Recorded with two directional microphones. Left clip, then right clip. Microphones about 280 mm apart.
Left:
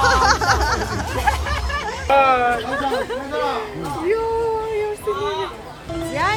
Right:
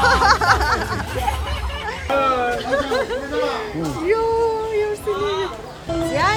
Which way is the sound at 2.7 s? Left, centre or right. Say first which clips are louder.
Right 2 dB; centre.